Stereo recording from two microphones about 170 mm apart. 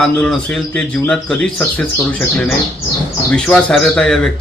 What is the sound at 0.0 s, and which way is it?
A man's voice, 5° left (ahead or behind).